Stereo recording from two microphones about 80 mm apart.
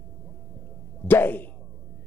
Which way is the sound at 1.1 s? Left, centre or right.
Left.